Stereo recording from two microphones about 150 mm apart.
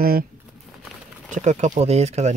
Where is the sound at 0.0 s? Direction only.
80° right.